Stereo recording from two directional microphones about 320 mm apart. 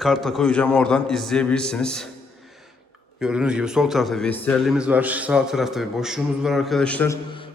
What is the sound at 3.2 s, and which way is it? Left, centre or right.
A man's voice, centre.